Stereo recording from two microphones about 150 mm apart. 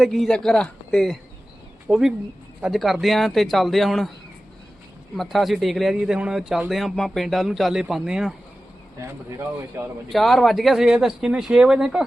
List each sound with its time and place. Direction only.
0.0 s a man's voice: centre (ahead or behind)
5.1 s a man's voice: centre (ahead or behind)
9.0 s speech: 15° right (ahead or behind)
10.1 s a man's voice: centre (ahead or behind)